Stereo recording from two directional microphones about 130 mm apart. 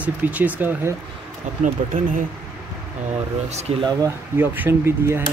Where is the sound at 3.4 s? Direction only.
55° right (ahead or behind).